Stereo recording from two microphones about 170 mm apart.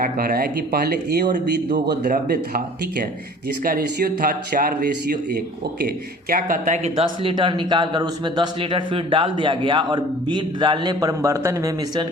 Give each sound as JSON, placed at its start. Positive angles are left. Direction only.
{"t": 0.0, "sound": "speech", "side_deg": -60}
{"t": 2.0, "sound": "speech", "side_deg": -55}
{"t": 3.6, "sound": "speech", "side_deg": -60}
{"t": 6.3, "sound": "speech", "side_deg": -50}